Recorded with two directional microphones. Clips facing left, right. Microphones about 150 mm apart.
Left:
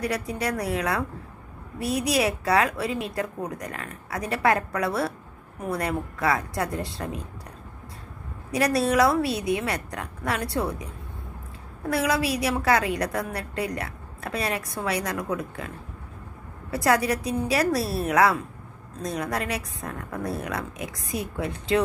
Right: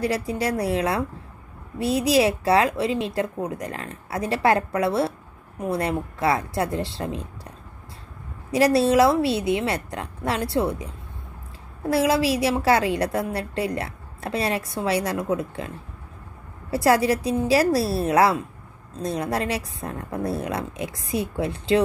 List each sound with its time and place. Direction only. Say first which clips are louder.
0.0 s a woman's voice: right 3 dB; 30° right (ahead or behind)
8.5 s a woman's voice: right 5 dB; 30° right (ahead or behind)
11.9 s a woman's voice: right 4 dB; 30° right (ahead or behind)
16.7 s a woman's voice: right 4 dB; 30° right (ahead or behind)